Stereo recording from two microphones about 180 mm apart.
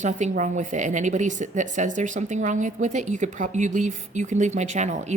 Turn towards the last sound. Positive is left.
turn(degrees=-40)  # may be behind; listen again after turning